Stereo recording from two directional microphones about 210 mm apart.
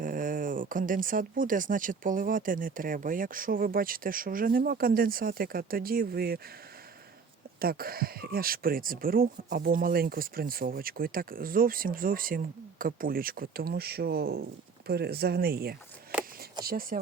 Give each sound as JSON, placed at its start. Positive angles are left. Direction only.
{"t": 0.0, "sound": "speech", "side_deg": -40}
{"t": 7.6, "sound": "speech", "side_deg": -45}